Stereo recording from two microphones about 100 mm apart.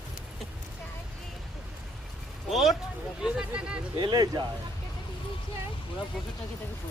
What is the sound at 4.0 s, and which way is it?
Speech, 45° right (ahead or behind).